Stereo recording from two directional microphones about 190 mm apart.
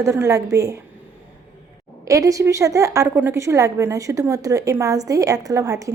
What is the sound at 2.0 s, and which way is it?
A woman's voice, 15° right (ahead or behind).